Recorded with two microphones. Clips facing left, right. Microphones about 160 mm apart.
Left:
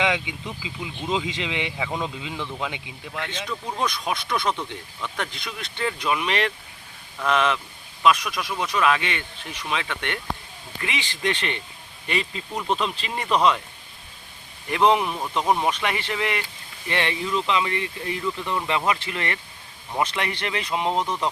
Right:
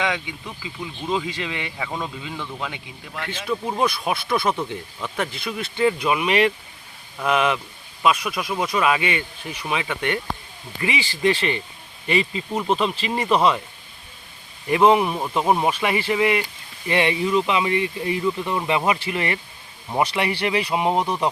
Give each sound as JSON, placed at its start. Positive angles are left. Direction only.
{"t": 0.0, "sound": "speech", "side_deg": 20}
{"t": 3.2, "sound": "speech", "side_deg": -10}
{"t": 14.7, "sound": "speech", "side_deg": -5}